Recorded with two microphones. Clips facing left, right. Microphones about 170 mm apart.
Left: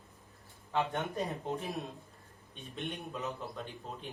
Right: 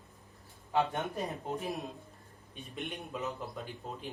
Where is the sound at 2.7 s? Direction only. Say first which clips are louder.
Even; centre (ahead or behind).